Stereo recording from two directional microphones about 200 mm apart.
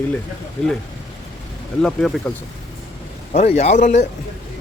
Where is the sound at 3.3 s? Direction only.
35° left (ahead or behind).